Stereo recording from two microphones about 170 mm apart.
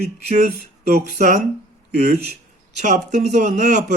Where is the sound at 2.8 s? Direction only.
45° right (ahead or behind).